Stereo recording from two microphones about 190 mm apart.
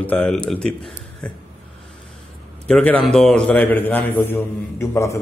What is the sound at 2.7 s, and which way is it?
A man's voice, 5° left (ahead or behind).